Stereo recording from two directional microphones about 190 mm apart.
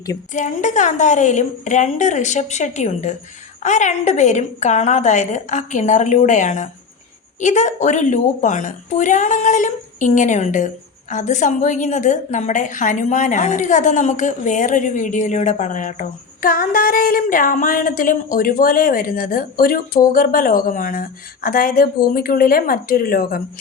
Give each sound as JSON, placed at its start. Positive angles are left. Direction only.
{"t": 0.3, "sound": "a woman's voice", "side_deg": 40}